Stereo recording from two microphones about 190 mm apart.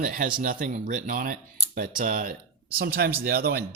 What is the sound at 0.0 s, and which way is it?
Speech, 50° right (ahead or behind).